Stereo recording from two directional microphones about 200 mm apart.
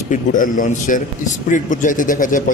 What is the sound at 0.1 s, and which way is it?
Speech, 40° left (ahead or behind).